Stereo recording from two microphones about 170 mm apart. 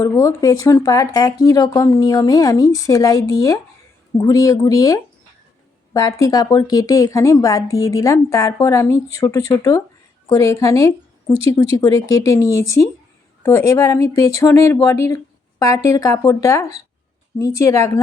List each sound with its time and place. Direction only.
0.0 s a woman's voice: 20° left (ahead or behind)